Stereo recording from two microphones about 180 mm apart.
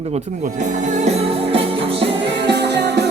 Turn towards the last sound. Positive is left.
turn(degrees=-70)  # may be behind; listen again after turning